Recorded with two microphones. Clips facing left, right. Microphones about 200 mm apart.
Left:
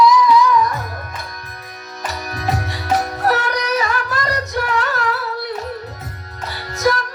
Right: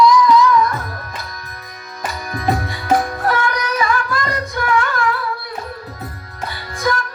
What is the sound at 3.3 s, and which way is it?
Music, 40° left (ahead or behind).